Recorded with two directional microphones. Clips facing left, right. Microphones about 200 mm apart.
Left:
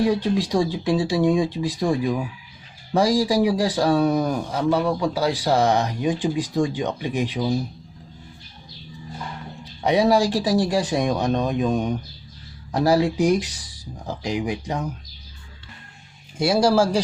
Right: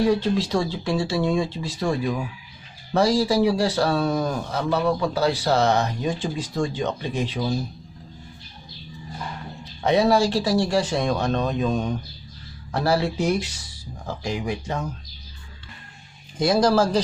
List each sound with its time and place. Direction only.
0.0 s speech: 15° left (ahead or behind)
9.8 s speech: 15° left (ahead or behind)
16.4 s speech: 10° left (ahead or behind)